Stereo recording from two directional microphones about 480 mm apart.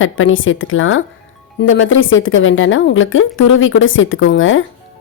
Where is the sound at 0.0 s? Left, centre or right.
Left.